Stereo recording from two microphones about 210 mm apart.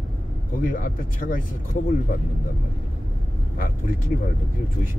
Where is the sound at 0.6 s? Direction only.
40° left (ahead or behind).